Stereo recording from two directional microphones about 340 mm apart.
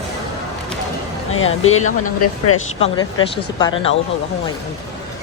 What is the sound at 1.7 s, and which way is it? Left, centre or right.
Speech, left.